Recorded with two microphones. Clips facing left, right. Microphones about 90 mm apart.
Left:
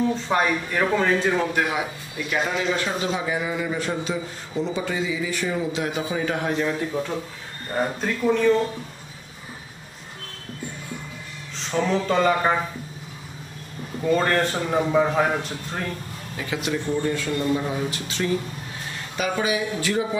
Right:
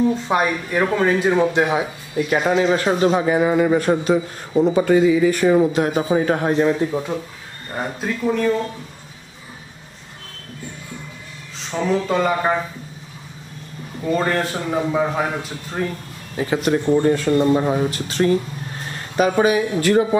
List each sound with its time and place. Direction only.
0.1 s speech: 15° right (ahead or behind)
2.1 s a man's voice: 40° right (ahead or behind)
6.9 s a man's voice: 15° right (ahead or behind)
11.5 s speech: 5° right (ahead or behind)
14.1 s a man's voice: 5° right (ahead or behind)
16.3 s a man's voice: 40° right (ahead or behind)